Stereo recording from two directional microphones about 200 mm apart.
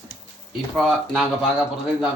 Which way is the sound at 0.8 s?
Centre (ahead or behind).